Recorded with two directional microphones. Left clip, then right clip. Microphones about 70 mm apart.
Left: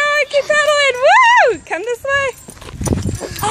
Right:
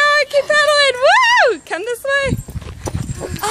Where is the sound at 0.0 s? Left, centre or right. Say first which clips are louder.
Right 1 dB; centre.